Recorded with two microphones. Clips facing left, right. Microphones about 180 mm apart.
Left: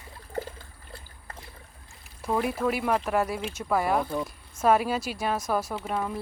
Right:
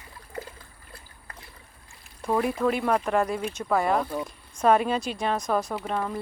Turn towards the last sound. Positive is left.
turn(degrees=5)  # may be behind; listen again after turning